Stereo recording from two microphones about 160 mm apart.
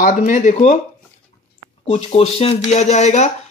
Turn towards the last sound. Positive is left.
turn(degrees=45)  # may be behind; listen again after turning